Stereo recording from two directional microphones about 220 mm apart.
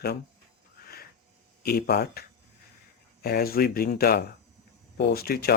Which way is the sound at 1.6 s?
45° left (ahead or behind).